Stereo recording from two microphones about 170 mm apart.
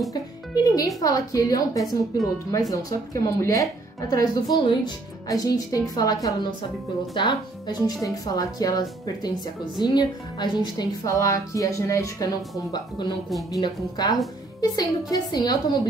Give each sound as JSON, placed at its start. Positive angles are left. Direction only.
{"t": 0.7, "sound": "a woman's voice", "side_deg": 20}